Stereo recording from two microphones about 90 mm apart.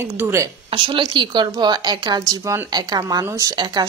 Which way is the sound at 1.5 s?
50° right (ahead or behind).